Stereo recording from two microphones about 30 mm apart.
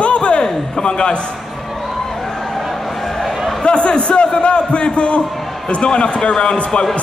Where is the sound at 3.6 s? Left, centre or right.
Left.